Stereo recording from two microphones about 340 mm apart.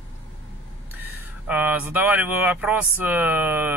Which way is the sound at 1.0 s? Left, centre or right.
Centre.